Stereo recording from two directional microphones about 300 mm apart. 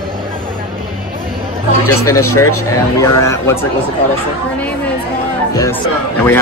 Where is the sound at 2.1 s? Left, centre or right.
Left.